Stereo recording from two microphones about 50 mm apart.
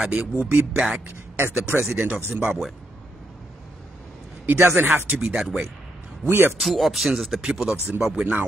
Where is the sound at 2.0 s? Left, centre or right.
Right.